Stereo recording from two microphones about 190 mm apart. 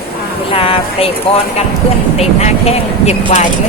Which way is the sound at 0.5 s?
30° left (ahead or behind).